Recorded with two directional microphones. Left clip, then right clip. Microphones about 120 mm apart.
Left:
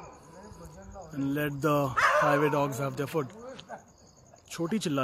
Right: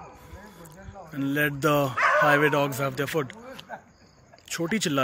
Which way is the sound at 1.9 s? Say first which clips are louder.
Even; 15° left (ahead or behind).